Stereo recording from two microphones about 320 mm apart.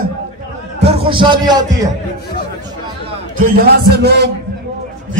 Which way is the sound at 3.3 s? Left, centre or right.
Right.